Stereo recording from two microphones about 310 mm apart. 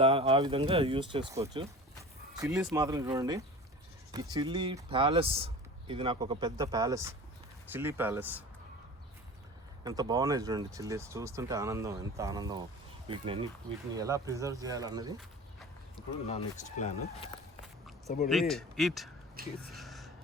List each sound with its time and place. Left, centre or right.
0.0 s speech: centre
9.8 s speech: centre
16.2 s speech: left
18.3 s speech: centre
19.4 s speech: right
19.7 s a sound: centre